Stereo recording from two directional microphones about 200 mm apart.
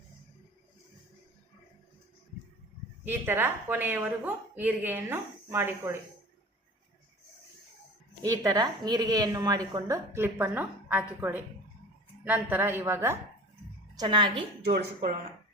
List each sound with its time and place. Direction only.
3.0 s a woman's voice: 10° right (ahead or behind)
8.2 s a woman's voice: 15° right (ahead or behind)
14.6 s speech: 50° right (ahead or behind)